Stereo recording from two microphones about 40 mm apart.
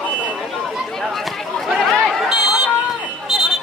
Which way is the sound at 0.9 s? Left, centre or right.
Centre.